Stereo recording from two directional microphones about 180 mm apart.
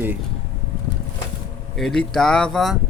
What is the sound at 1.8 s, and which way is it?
Speech, centre (ahead or behind).